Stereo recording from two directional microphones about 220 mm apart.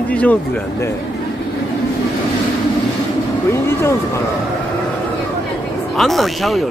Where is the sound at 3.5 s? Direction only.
10° left (ahead or behind).